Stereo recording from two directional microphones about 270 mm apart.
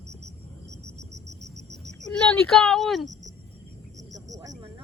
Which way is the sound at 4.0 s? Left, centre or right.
Centre.